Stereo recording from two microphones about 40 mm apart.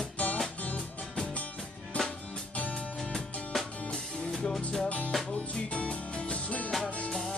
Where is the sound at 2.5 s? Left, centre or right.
Left.